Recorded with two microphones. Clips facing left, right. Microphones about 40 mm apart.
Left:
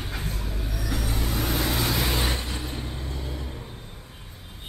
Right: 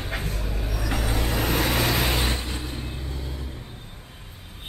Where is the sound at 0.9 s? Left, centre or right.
Right.